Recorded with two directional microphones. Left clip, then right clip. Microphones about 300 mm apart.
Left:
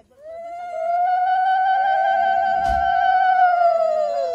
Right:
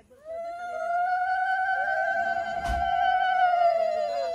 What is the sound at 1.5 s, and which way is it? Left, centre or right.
Mosquito, centre.